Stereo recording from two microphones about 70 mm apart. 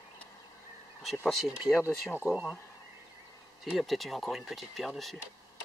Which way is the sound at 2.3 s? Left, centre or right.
Left.